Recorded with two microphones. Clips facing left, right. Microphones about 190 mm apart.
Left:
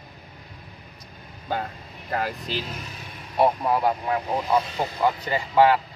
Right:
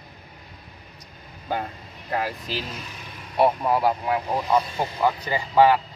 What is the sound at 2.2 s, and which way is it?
Speech, 5° right (ahead or behind).